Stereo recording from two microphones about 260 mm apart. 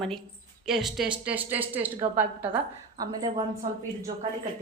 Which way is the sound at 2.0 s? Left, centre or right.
Right.